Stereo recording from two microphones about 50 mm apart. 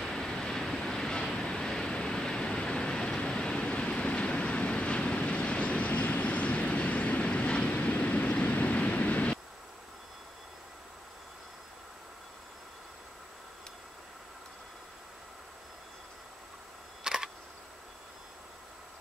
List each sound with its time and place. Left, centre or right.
0.0 s vehicle: centre
17.0 s camera: centre